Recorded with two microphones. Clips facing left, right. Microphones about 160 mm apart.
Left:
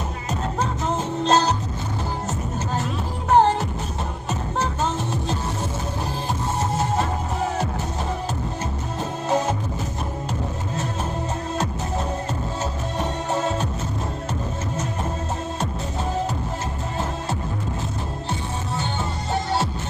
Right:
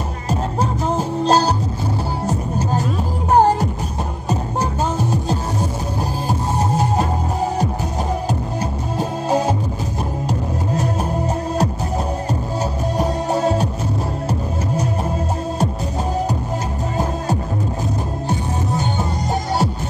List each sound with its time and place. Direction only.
0.8 s music: 35° right (ahead or behind)
4.9 s music: 40° right (ahead or behind)
6.7 s music: 35° right (ahead or behind)
8.9 s music: 35° right (ahead or behind)
12.9 s music: 35° right (ahead or behind)